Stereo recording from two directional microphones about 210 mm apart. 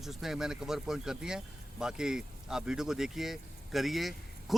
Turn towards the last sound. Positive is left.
turn(degrees=0)  # may be behind; listen again after turning